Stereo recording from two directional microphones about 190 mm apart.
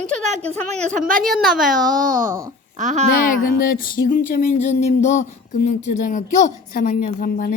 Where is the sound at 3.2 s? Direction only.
50° left (ahead or behind).